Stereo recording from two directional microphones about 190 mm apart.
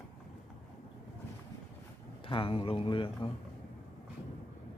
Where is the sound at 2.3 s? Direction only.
25° left (ahead or behind).